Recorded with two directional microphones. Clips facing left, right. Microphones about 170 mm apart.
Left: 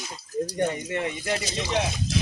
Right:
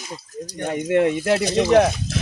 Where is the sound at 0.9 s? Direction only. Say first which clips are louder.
Right 10 dB; 65° right (ahead or behind).